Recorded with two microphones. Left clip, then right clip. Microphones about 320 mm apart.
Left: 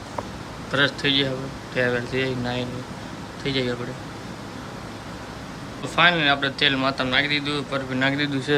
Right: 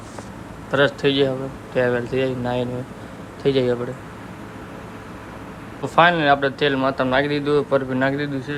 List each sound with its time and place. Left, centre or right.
0.7 s a man's voice: centre
6.0 s a man's voice: centre